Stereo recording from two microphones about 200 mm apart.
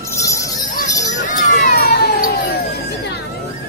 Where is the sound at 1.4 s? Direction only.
35° left (ahead or behind).